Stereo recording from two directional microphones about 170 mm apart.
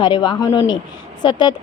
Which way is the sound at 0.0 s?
25° left (ahead or behind).